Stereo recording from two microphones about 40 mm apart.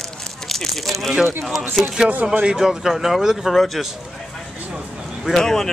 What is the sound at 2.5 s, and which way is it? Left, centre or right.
Speech, centre.